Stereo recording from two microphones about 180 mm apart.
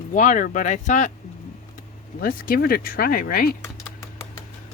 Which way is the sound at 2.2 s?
55° left (ahead or behind).